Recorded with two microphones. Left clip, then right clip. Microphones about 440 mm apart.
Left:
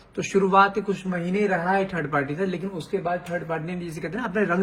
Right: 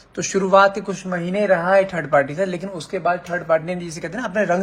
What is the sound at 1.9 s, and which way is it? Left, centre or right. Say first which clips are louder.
Speech: right 8 dB; centre.